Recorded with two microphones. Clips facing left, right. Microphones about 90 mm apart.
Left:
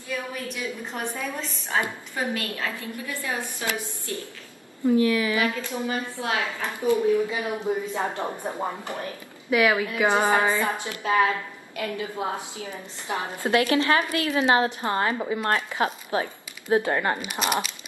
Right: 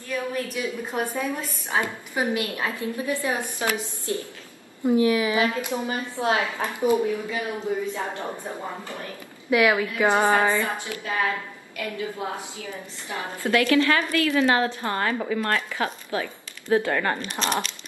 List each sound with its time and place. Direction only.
0.6 s a woman's voice: 15° right (ahead or behind)
7.2 s a woman's voice: 20° left (ahead or behind)
9.5 s a woman's voice: centre (ahead or behind)
10.2 s a woman's voice: 15° left (ahead or behind)